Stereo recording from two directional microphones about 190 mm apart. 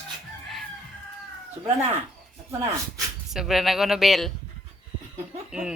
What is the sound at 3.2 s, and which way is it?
Speech, centre (ahead or behind).